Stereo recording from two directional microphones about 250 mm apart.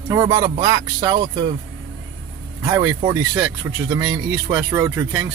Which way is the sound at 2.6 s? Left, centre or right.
Centre.